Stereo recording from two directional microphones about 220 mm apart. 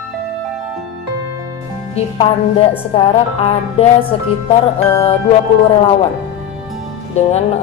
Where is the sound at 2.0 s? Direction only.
25° left (ahead or behind).